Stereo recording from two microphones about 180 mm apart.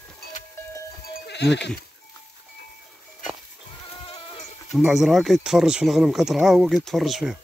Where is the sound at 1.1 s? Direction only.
70° left (ahead or behind).